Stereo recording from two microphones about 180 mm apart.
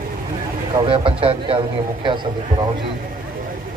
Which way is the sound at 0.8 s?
30° right (ahead or behind).